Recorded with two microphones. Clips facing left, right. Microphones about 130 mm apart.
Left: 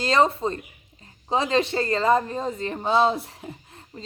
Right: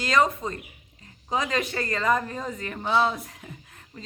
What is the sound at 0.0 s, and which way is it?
A woman's voice, 30° left (ahead or behind).